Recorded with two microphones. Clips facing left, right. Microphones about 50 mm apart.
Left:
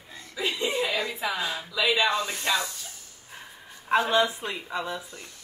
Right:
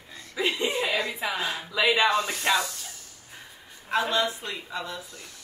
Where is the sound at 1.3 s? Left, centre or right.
Right.